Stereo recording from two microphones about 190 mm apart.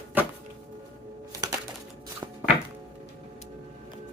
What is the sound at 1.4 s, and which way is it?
Music, 20° right (ahead or behind).